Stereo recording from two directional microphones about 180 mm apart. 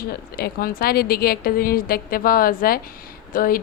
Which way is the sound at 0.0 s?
60° left (ahead or behind).